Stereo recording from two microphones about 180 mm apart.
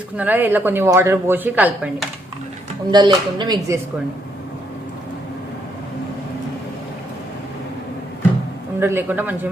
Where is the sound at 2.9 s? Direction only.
25° right (ahead or behind).